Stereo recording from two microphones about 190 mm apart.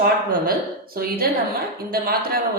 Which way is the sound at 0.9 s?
50° right (ahead or behind).